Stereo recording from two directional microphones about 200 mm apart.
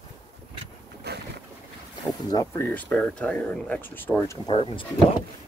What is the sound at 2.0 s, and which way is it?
Speech, 15° left (ahead or behind).